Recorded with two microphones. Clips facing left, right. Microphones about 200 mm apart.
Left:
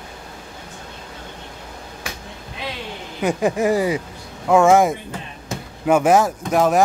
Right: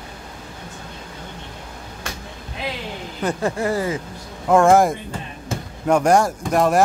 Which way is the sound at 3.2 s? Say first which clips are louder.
Left 3 dB; 15° left (ahead or behind).